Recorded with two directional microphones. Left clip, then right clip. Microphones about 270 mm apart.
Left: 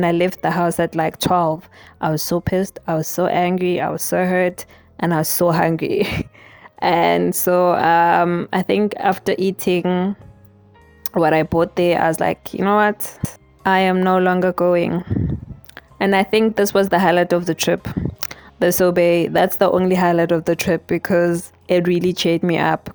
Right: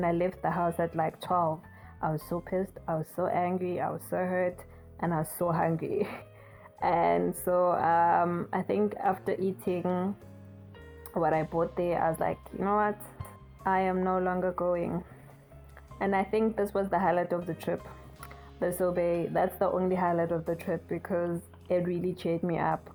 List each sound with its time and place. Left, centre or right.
0.0 s speech: left